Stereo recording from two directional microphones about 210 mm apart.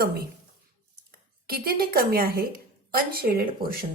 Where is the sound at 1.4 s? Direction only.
45° right (ahead or behind).